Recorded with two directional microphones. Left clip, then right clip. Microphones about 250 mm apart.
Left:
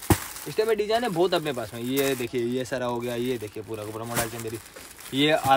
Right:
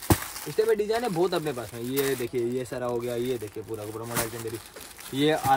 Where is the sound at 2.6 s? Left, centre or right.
Left.